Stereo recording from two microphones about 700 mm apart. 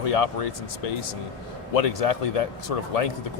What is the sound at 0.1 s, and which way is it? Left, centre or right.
Speech, left.